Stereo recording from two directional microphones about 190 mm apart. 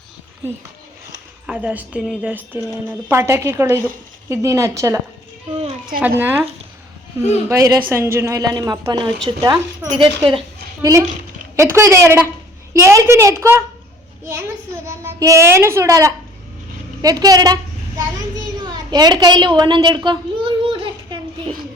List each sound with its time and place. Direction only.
1.5 s a woman's voice: 10° right (ahead or behind)
6.0 s a woman's voice: 10° right (ahead or behind); by 10.4 s 25° right (ahead or behind)
11.5 s a woman's voice: 15° right (ahead or behind)
14.8 s a child's voice: 15° right (ahead or behind)
20.1 s a sound: 25° right (ahead or behind)